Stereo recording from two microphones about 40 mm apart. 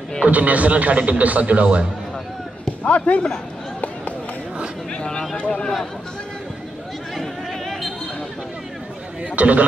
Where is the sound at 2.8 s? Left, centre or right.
Left.